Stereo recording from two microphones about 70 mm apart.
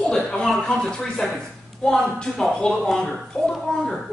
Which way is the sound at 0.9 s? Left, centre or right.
Centre.